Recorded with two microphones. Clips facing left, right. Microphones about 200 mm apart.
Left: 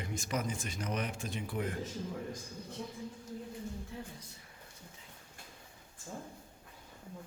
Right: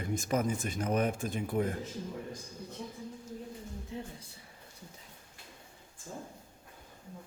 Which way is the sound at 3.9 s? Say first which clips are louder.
Right 4 dB; 20° right (ahead or behind).